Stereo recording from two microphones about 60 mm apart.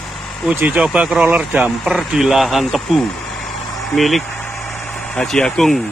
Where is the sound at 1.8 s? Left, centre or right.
Centre.